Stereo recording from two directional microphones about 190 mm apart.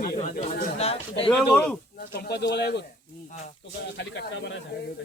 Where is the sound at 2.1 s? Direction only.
60° left (ahead or behind).